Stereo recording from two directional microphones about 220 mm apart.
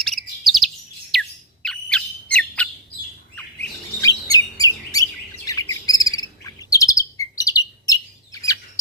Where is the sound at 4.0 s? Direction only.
15° left (ahead or behind).